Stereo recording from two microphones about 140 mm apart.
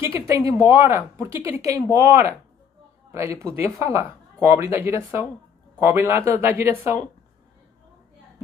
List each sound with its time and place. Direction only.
0.0 s speech: 20° right (ahead or behind)